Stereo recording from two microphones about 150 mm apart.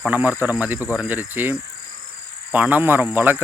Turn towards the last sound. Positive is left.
turn(degrees=-15)  # may be behind; listen again after turning